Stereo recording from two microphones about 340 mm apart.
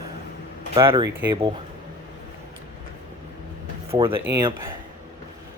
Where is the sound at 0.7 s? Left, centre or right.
Centre.